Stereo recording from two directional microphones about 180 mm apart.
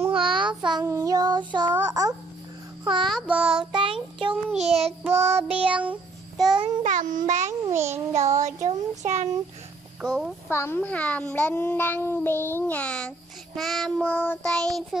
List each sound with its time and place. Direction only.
0.2 s child singing: 25° right (ahead or behind)
1.9 s babbling: 20° right (ahead or behind)
2.8 s music: 25° right (ahead or behind)
3.1 s child singing: 5° right (ahead or behind)
3.7 s child singing: 25° right (ahead or behind)
5.0 s child singing: 10° right (ahead or behind)
6.8 s a child's voice: 45° right (ahead or behind)
7.6 s a child's voice: 15° right (ahead or behind)
8.1 s child singing: 40° right (ahead or behind)
10.0 s child singing: 5° right (ahead or behind)
10.5 s a child's voice: 15° left (ahead or behind)
13.6 s child singing: centre (ahead or behind)